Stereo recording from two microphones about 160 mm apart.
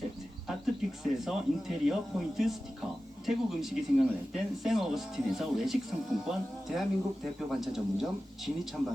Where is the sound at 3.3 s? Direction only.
Centre (ahead or behind).